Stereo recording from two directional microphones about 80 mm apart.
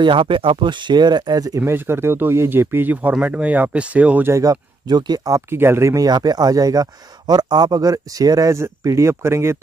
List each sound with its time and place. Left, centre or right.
0.0 s speech: right
1.7 s speech: right
4.3 s speech: right
5.5 s speech: right
6.0 s speech: right
8.5 s speech: right